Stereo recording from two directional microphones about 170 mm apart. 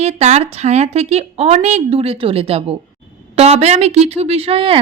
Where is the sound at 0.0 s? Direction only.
40° right (ahead or behind).